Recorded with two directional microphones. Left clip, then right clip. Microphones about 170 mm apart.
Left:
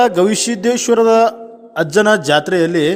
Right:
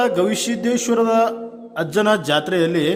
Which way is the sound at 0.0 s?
35° left (ahead or behind).